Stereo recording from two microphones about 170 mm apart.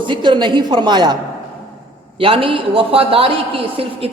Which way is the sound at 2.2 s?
30° right (ahead or behind).